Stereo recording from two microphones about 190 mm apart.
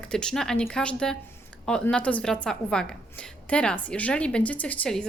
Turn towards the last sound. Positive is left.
turn(degrees=5)  # may be behind; listen again after turning